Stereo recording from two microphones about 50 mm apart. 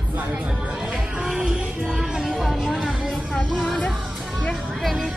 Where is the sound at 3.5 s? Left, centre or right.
Centre.